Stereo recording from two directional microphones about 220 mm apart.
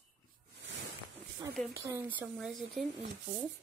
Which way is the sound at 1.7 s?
10° right (ahead or behind).